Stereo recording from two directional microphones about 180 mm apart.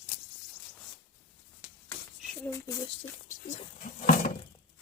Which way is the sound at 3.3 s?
45° left (ahead or behind).